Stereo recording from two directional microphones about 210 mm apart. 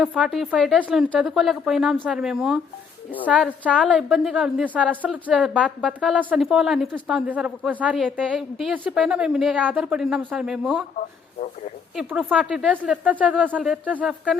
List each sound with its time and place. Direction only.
0.0 s a woman's voice: 5° right (ahead or behind)
10.9 s speech: 35° left (ahead or behind)
11.9 s a woman's voice: 5° right (ahead or behind)